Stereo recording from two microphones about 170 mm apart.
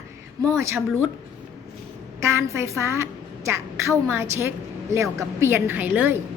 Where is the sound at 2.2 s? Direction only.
15° right (ahead or behind).